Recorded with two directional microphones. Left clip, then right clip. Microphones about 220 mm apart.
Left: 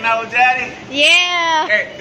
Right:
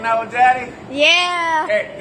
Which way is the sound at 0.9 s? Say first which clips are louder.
Left 2 dB; centre (ahead or behind).